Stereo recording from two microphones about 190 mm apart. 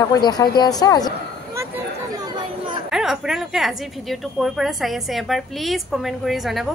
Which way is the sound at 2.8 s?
Centre (ahead or behind).